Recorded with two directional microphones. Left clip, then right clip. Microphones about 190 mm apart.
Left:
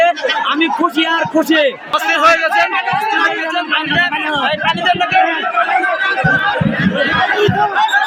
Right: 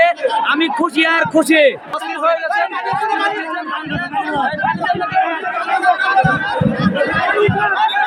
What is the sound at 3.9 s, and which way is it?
Speech, 40° left (ahead or behind).